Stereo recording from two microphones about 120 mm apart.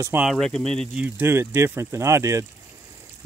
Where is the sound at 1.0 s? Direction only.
15° right (ahead or behind).